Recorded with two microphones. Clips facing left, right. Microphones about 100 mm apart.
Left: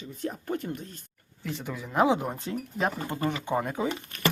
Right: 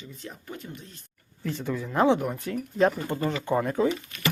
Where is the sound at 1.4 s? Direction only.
5° left (ahead or behind).